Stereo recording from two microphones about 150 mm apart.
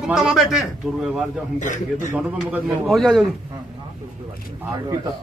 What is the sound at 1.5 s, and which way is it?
Speech, 60° left (ahead or behind).